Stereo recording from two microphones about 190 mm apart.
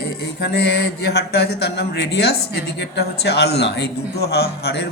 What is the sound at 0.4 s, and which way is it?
Speech, 60° left (ahead or behind).